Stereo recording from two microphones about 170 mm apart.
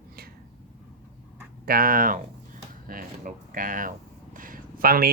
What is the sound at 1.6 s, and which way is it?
Speech, 60° right (ahead or behind).